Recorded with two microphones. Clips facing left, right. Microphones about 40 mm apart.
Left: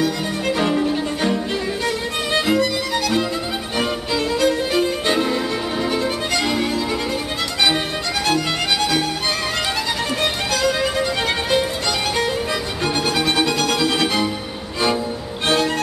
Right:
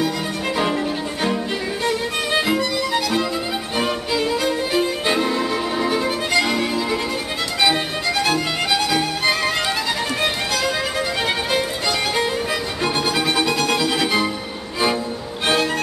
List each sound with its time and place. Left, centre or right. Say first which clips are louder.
0.6 s music: left 2 dB; centre
12.8 s music: left 1 dB; centre
15.4 s music: left 1 dB; centre